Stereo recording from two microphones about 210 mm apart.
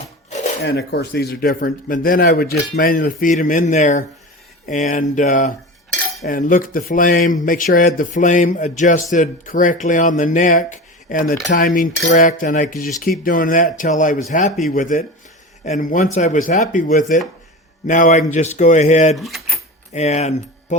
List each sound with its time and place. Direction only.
0.6 s speech: 50° left (ahead or behind); by 19.1 s 35° left (ahead or behind)
19.1 s keys jangling: centre (ahead or behind)
19.9 s speech: 30° left (ahead or behind)